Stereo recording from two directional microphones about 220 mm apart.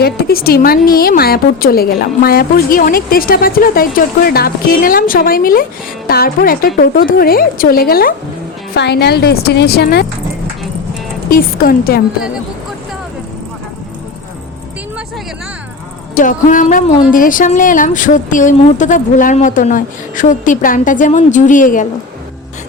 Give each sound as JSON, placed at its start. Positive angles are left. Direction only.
{"t": 0.0, "sound": "a woman's voice", "side_deg": 45}
{"t": 11.3, "sound": "speech", "side_deg": 40}
{"t": 16.1, "sound": "speech", "side_deg": 35}